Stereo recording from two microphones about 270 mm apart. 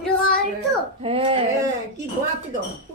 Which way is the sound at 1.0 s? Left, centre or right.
Right.